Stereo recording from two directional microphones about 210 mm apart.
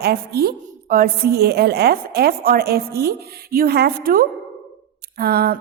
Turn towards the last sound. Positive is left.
turn(degrees=-50)  # may be behind; listen again after turning